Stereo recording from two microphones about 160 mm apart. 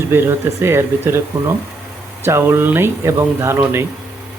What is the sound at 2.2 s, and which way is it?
Speech, 15° right (ahead or behind).